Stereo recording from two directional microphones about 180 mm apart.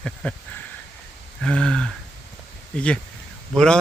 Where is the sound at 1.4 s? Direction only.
5° left (ahead or behind).